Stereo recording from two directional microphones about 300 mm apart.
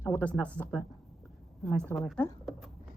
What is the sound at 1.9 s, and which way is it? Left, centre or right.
Speech, centre.